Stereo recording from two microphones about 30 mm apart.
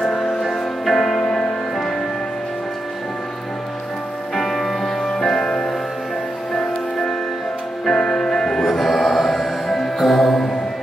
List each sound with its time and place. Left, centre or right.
0.0 s music: centre
4.4 s music: centre
5.0 s music: centre
8.6 s mantra: centre